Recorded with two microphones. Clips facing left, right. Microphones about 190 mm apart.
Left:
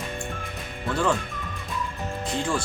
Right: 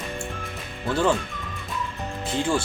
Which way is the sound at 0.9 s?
Centre (ahead or behind).